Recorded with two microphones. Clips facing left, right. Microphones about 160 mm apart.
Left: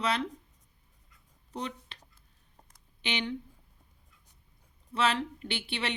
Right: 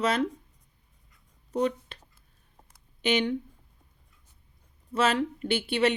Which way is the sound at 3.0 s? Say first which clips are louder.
Right 8 dB; 45° right (ahead or behind).